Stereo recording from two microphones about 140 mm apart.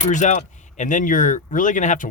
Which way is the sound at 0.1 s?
60° left (ahead or behind).